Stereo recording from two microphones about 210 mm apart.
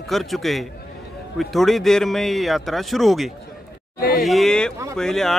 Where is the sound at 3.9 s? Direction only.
45° left (ahead or behind).